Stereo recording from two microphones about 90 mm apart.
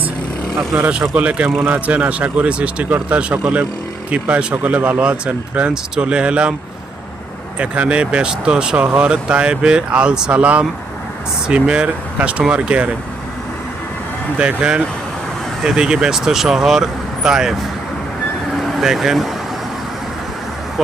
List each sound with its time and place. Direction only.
0.8 s speech: 15° right (ahead or behind)
7.6 s speech: 15° right (ahead or behind)
14.3 s speech: 10° right (ahead or behind)
18.5 s vehicle: centre (ahead or behind)